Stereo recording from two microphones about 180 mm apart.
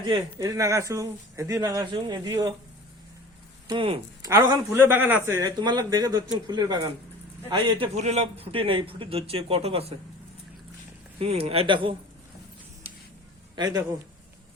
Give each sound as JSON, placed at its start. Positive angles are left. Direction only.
{"t": 0.0, "sound": "speech", "side_deg": -20}
{"t": 3.7, "sound": "speech", "side_deg": -30}
{"t": 7.9, "sound": "a man's voice", "side_deg": -35}
{"t": 11.2, "sound": "a man's voice", "side_deg": -35}
{"t": 13.6, "sound": "speech", "side_deg": -20}